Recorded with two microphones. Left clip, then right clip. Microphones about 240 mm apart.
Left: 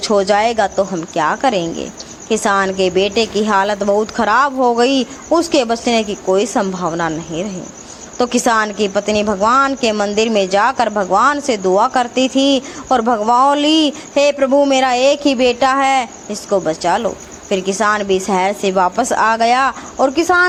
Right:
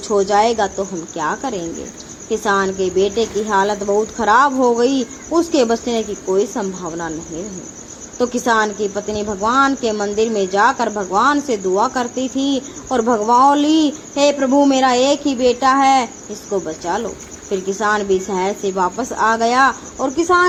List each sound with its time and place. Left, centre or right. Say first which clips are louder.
0.0 s speech: left 1 dB; left
8.2 s speech: left 2 dB; left